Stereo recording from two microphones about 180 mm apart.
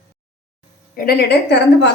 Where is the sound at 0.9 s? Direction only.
60° left (ahead or behind).